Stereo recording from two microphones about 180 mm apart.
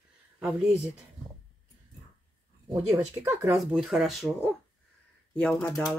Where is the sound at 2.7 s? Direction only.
15° right (ahead or behind).